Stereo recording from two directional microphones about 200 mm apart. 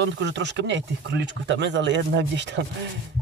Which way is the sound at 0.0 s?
60° right (ahead or behind).